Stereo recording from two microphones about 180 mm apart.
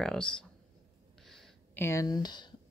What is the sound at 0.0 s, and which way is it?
Speech, 5° left (ahead or behind).